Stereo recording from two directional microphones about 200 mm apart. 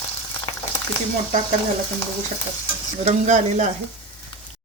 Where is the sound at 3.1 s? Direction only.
35° right (ahead or behind).